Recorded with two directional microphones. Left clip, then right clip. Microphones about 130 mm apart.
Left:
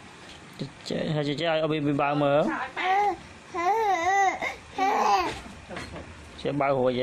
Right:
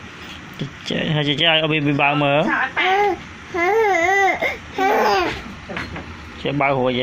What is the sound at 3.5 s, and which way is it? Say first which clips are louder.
Babbling: right 7 dB; 20° left (ahead or behind).